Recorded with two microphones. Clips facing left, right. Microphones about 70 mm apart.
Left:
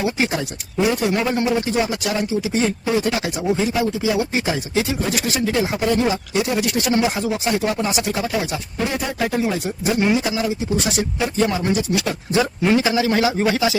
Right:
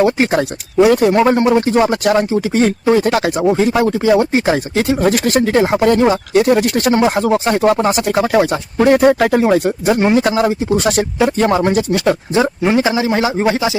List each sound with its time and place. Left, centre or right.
0.0 s speech: right
12.3 s speech: right